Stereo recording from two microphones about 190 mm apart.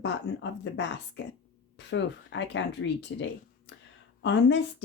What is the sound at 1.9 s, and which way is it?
Speech, 70° left (ahead or behind).